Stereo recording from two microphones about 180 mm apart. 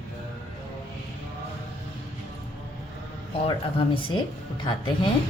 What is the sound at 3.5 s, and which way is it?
Speech, 25° left (ahead or behind).